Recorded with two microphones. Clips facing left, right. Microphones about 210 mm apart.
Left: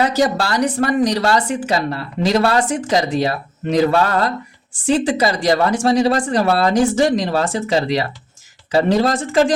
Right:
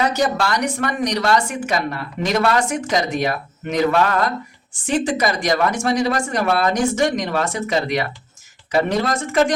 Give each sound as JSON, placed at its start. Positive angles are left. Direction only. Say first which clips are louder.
{"t": 0.0, "sound": "speech", "louder": "left 2 dB", "side_deg": 30}